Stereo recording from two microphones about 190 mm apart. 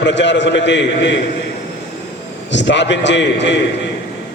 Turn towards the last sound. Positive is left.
turn(degrees=70)  # may be behind; listen again after turning